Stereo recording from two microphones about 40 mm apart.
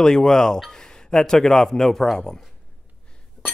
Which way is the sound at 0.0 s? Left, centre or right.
Centre.